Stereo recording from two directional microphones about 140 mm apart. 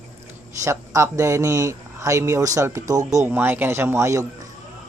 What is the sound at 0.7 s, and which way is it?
A man's voice, 20° right (ahead or behind).